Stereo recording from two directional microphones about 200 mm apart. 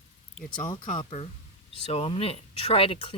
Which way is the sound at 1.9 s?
30° left (ahead or behind).